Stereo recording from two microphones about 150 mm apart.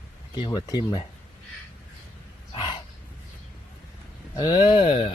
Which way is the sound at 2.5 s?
30° left (ahead or behind).